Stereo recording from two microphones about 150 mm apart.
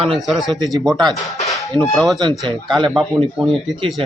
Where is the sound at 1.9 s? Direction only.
Centre (ahead or behind).